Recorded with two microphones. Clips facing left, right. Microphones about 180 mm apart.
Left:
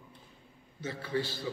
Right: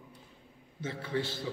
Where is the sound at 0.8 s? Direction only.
25° right (ahead or behind).